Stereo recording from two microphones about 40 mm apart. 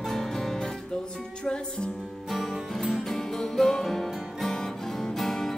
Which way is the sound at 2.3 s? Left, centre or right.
Centre.